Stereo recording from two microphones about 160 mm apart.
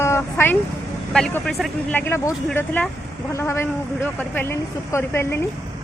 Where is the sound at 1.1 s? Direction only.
5° left (ahead or behind).